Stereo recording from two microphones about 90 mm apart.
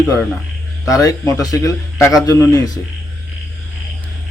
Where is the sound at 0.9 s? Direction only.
40° left (ahead or behind).